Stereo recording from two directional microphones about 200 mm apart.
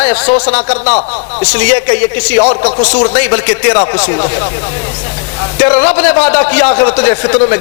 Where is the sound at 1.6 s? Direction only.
10° left (ahead or behind).